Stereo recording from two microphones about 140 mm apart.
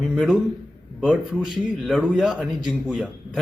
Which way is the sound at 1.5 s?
5° left (ahead or behind).